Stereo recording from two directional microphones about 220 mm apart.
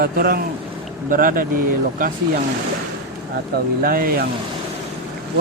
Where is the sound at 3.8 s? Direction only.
40° right (ahead or behind).